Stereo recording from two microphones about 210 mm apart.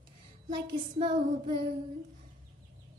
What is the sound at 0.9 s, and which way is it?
Child singing, 25° right (ahead or behind).